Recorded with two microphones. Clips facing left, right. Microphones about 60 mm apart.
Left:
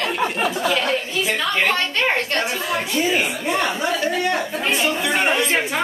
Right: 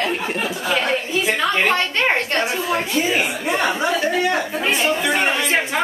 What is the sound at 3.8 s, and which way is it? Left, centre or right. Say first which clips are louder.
Speech: right 2 dB; right.